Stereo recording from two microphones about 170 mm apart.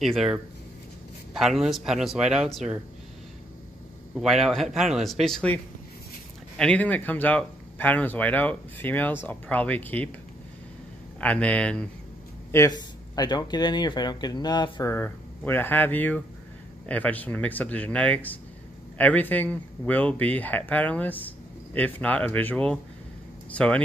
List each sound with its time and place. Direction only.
0.0 s a man's voice: centre (ahead or behind)
4.1 s a man's voice: centre (ahead or behind)
6.6 s speech: 10° left (ahead or behind)
11.1 s speech: 5° left (ahead or behind)
12.4 s speech: 20° left (ahead or behind)